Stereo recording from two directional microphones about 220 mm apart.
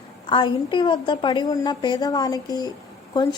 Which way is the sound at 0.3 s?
20° left (ahead or behind).